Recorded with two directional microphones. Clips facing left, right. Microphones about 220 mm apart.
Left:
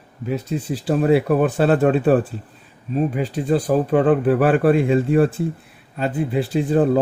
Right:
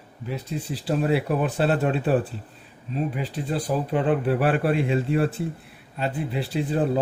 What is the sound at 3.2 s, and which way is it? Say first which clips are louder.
A man's voice: left 8 dB; 45° left (ahead or behind).